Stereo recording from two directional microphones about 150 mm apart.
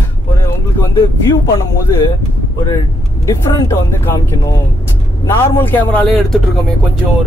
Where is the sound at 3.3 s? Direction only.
20° left (ahead or behind).